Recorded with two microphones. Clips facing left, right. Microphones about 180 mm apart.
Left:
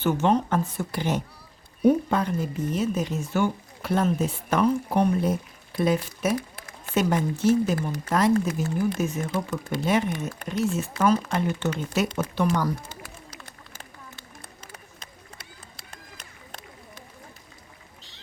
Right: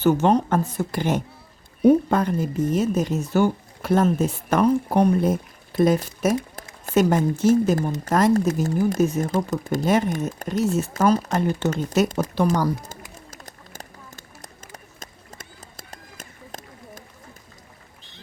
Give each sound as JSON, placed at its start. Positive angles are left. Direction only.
{"t": 0.0, "sound": "speech", "side_deg": -40}
{"t": 13.3, "sound": "run", "side_deg": -45}